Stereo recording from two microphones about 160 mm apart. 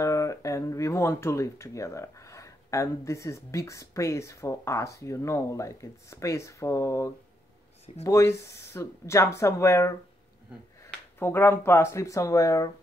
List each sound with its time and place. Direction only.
0.0 s speech: 20° left (ahead or behind)